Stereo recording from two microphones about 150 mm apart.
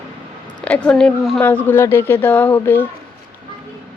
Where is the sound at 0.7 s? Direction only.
5° left (ahead or behind).